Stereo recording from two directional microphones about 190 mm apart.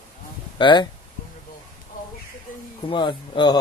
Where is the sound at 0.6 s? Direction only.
25° left (ahead or behind).